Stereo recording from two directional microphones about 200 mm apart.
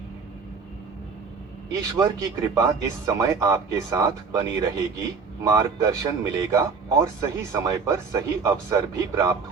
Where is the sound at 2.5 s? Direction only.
15° right (ahead or behind).